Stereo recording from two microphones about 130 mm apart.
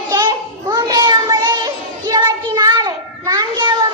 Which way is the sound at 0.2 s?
35° right (ahead or behind).